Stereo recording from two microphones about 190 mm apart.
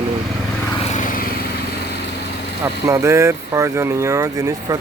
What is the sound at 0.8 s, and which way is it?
Vehicle, 40° left (ahead or behind).